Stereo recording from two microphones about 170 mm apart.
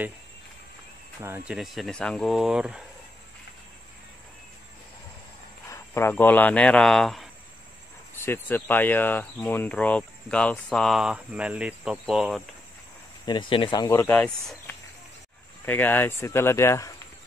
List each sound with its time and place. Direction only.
1.2 s speech: 15° right (ahead or behind)
1.6 s speech: centre (ahead or behind)
5.7 s speech: 15° left (ahead or behind)
8.3 s speech: 10° left (ahead or behind)
13.2 s speech: 25° left (ahead or behind)
13.8 s speech: 15° left (ahead or behind)